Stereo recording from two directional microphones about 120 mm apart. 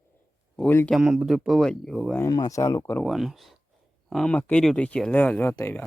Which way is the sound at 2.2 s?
30° left (ahead or behind).